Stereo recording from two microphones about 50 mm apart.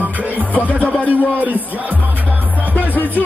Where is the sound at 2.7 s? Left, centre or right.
Left.